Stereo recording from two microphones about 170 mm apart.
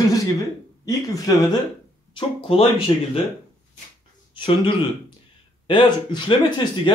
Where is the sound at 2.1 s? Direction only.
35° left (ahead or behind).